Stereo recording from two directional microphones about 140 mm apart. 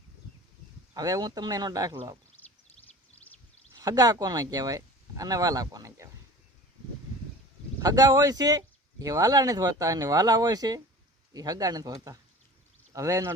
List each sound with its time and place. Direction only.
0.9 s speech: 25° right (ahead or behind)
2.4 s a sound: 15° left (ahead or behind)
3.8 s speech: 25° right (ahead or behind)
7.8 s speech: 25° right (ahead or behind)